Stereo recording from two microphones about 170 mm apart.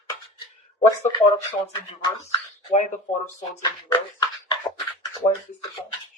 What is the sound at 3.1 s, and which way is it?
Speech, centre (ahead or behind).